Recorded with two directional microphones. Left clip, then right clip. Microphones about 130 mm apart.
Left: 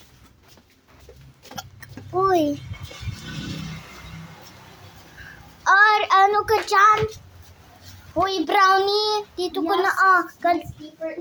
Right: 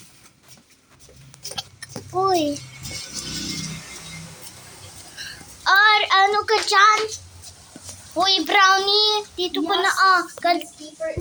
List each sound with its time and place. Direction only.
1.5 s a sound: 15° left (ahead or behind)
5.6 s child singing: 15° left (ahead or behind)
8.2 s a child's voice: 10° left (ahead or behind)